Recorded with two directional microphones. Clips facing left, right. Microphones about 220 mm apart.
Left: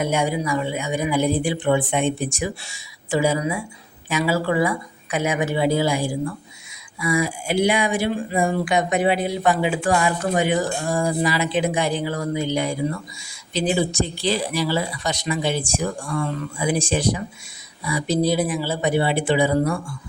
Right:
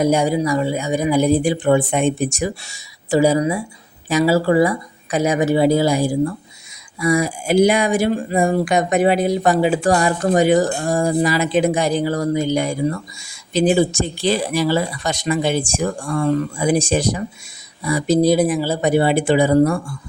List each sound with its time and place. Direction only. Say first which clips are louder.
0.0 s speech: right 6 dB; 40° right (ahead or behind)